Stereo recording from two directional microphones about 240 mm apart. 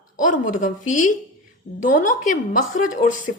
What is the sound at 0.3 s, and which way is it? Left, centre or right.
A woman's voice, left.